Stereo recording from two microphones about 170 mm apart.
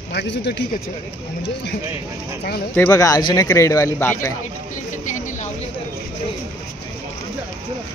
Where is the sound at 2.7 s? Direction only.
15° left (ahead or behind).